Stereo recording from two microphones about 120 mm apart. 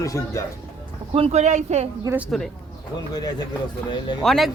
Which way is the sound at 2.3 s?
5° left (ahead or behind).